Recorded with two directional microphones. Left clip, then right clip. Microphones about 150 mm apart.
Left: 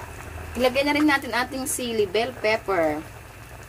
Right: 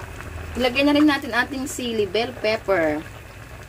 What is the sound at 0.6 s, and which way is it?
A woman's voice, 10° right (ahead or behind).